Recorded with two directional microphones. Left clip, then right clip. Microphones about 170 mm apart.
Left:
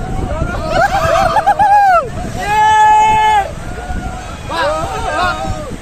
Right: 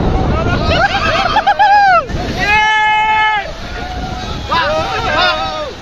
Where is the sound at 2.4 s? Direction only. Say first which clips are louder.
Left 2 dB; 35° left (ahead or behind).